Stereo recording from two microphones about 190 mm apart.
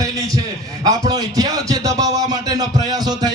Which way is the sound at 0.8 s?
20° right (ahead or behind).